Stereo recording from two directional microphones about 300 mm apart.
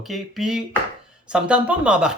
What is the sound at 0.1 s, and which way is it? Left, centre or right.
Speech, centre.